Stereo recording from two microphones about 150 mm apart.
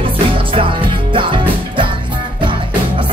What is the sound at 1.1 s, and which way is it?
Music, 35° right (ahead or behind).